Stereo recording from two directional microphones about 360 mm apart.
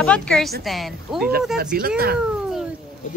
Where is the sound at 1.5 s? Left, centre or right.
Right.